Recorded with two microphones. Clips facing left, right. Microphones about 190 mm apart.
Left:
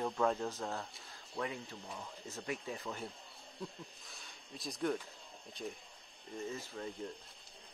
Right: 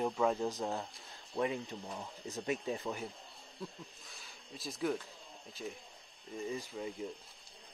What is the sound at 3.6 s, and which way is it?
Speech, centre (ahead or behind).